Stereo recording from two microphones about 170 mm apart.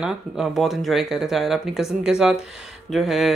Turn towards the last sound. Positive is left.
turn(degrees=0)  # may be behind; listen again after turning